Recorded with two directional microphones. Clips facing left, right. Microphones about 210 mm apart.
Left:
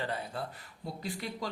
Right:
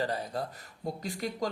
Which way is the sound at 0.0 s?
40° right (ahead or behind).